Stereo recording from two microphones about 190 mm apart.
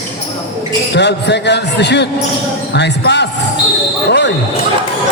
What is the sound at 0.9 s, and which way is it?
A man's voice, 65° left (ahead or behind).